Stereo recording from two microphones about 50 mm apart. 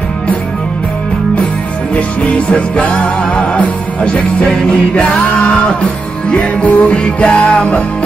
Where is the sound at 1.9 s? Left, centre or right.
Left.